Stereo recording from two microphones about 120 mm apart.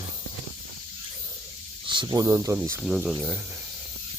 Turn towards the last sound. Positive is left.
turn(degrees=-10)  # may be behind; listen again after turning